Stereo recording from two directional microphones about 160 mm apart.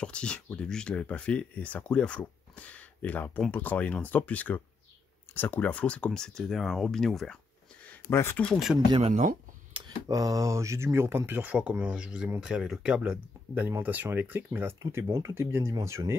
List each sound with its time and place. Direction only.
0.0 s speech: 5° left (ahead or behind)
7.9 s speech: 15° left (ahead or behind)
8.7 s speech: 35° right (ahead or behind); by 16.2 s 15° right (ahead or behind)